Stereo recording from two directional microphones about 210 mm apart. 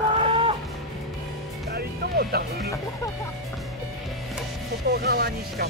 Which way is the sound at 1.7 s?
50° right (ahead or behind).